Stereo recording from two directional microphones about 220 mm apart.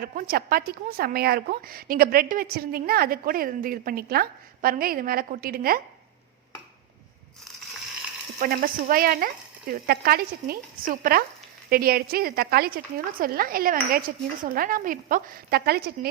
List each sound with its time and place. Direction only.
0.0 s a woman's voice: 40° right (ahead or behind)
8.4 s a woman's voice: 40° right (ahead or behind)